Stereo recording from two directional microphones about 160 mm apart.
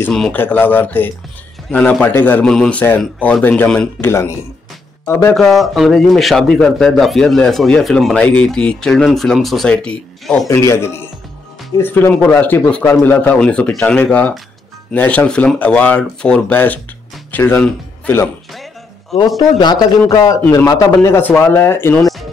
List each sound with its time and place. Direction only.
0.0 s speech: 5° left (ahead or behind)
4.1 s speech: 20° left (ahead or behind)
5.3 s speech: centre (ahead or behind)
10.5 s speech: 15° left (ahead or behind)
19.3 s a man's voice: 25° left (ahead or behind)